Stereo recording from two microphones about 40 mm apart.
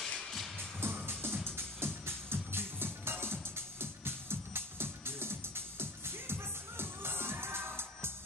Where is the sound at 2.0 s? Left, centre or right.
Right.